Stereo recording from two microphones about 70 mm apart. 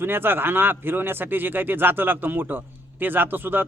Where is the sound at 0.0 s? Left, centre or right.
Right.